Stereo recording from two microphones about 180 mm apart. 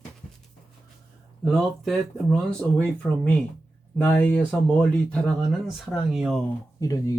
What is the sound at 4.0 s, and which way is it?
Speech, 5° left (ahead or behind).